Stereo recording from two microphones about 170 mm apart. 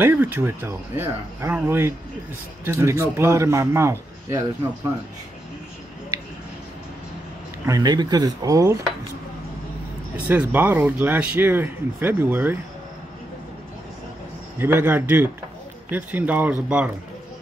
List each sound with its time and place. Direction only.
0.0 s speech: 10° right (ahead or behind)
7.6 s speech: 20° right (ahead or behind)
10.1 s speech: 10° right (ahead or behind)
14.6 s speech: 10° right (ahead or behind)